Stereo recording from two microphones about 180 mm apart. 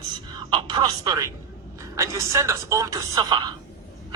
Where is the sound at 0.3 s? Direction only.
25° right (ahead or behind).